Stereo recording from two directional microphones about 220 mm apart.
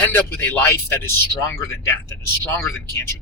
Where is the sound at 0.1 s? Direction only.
10° left (ahead or behind).